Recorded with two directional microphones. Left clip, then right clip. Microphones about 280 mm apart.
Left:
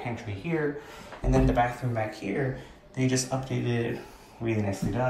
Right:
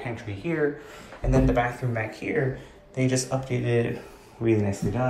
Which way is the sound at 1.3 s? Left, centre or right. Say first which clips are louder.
Right 1 dB; centre.